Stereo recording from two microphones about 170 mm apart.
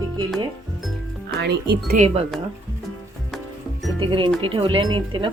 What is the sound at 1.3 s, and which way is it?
Speech, 70° right (ahead or behind).